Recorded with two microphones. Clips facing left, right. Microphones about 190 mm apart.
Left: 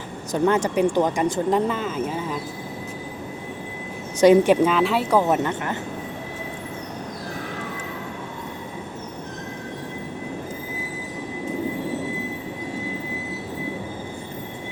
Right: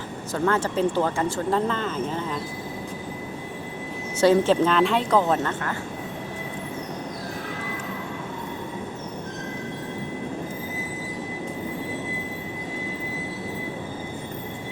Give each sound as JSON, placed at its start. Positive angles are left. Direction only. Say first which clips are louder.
{"t": 0.3, "sound": "speech", "louder": "left 3 dB", "side_deg": 15}
{"t": 4.2, "sound": "speech", "louder": "left 4 dB", "side_deg": 15}